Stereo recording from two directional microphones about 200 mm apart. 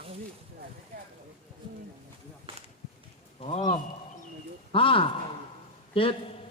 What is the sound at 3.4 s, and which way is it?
Speech, 30° left (ahead or behind).